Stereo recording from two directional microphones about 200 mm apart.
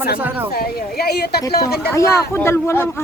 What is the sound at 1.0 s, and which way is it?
Speech, 55° left (ahead or behind).